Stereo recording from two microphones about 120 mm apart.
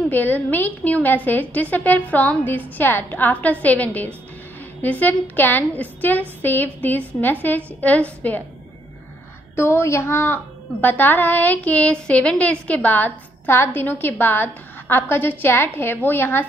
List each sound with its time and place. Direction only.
0.1 s a woman's voice: 15° left (ahead or behind)
9.6 s a woman's voice: 20° left (ahead or behind)